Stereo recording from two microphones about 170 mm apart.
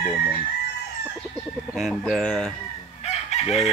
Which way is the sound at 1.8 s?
Centre (ahead or behind).